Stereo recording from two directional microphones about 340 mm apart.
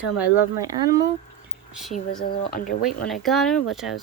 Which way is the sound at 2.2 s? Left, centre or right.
Left.